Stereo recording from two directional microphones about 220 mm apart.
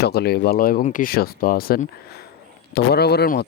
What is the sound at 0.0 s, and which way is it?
Speech, 45° left (ahead or behind).